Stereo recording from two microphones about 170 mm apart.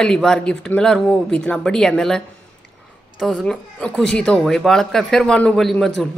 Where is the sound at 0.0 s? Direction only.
5° left (ahead or behind).